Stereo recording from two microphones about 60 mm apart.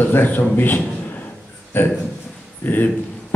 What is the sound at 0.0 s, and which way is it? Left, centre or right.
A man's voice, left.